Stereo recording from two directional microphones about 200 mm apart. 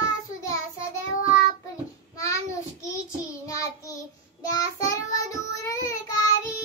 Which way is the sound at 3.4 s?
15° left (ahead or behind).